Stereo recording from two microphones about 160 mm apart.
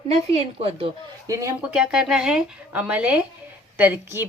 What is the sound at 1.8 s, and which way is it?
A woman's voice, 5° right (ahead or behind).